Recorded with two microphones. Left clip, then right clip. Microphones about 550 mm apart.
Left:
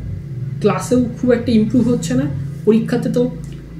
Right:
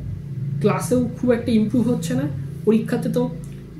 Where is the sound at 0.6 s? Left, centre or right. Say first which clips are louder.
Left 4 dB; right.